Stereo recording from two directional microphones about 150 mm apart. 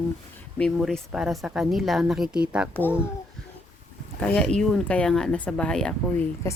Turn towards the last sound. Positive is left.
turn(degrees=5)  # may be behind; listen again after turning